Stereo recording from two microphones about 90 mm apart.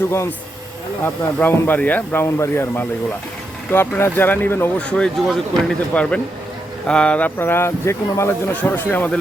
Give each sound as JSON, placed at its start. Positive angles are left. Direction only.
{"t": 0.1, "sound": "speech", "side_deg": 30}
{"t": 2.2, "sound": "speech", "side_deg": 30}
{"t": 4.9, "sound": "speech", "side_deg": 10}
{"t": 8.5, "sound": "speech", "side_deg": 20}